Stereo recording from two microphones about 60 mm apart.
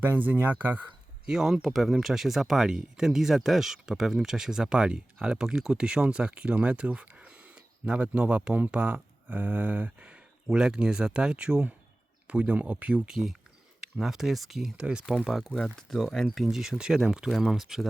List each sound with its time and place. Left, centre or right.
0.0 s speech: right
1.3 s speech: centre; by 13.1 s right
13.1 s speech: centre
15.3 s speech: centre